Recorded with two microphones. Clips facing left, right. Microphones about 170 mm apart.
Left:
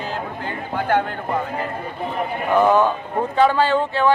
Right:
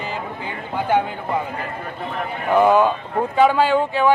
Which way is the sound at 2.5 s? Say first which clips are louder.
Right 1 dB; 10° right (ahead or behind).